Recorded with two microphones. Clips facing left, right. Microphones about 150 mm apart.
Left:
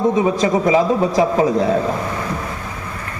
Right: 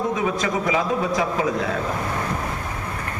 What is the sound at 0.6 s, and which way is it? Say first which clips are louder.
A man's voice: left 7 dB; 35° left (ahead or behind).